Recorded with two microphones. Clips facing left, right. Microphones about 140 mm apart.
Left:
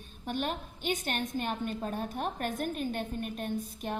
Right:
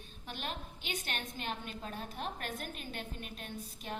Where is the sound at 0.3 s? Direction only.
50° left (ahead or behind).